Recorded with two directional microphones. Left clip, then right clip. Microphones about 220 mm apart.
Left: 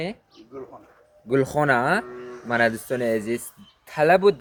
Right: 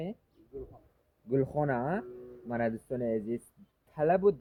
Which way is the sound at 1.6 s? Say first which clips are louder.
Left 11 dB; 15° left (ahead or behind).